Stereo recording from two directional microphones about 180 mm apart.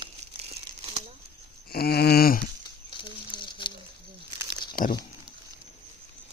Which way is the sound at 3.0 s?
25° left (ahead or behind).